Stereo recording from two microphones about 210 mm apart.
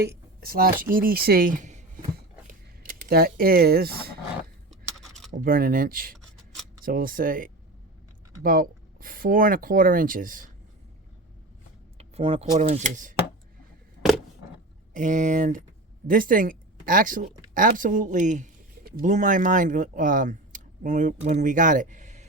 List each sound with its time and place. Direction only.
0.0 s speech: 45° right (ahead or behind)
2.5 s a sound: 40° right (ahead or behind)
4.7 s a sound: centre (ahead or behind)
5.4 s speech: 40° right (ahead or behind)
11.9 s speech: 30° right (ahead or behind)
14.9 s speech: 35° right (ahead or behind)